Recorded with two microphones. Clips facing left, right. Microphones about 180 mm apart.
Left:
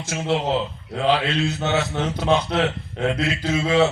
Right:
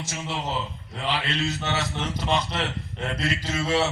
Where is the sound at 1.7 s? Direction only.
60° left (ahead or behind).